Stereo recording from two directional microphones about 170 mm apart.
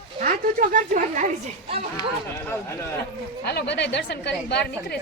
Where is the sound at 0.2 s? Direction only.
50° right (ahead or behind).